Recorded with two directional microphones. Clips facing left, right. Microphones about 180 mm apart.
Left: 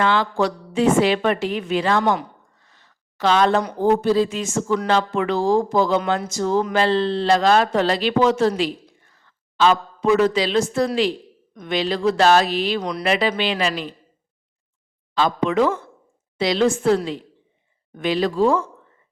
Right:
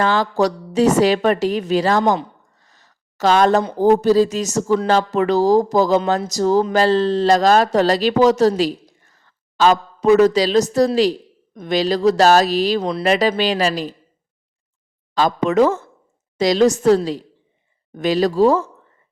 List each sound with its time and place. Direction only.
0.0 s speech: 40° right (ahead or behind)
2.6 s a sound: 40° right (ahead or behind)
3.8 s speech: 40° right (ahead or behind)
12.8 s speech: 25° right (ahead or behind)
13.1 s speech: 40° right (ahead or behind)
15.1 s speech: 45° right (ahead or behind)